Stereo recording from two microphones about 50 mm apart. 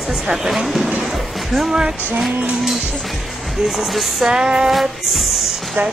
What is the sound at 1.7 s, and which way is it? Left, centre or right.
Speech, centre.